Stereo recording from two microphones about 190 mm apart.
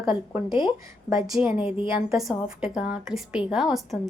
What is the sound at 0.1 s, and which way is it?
A woman's voice, 15° right (ahead or behind).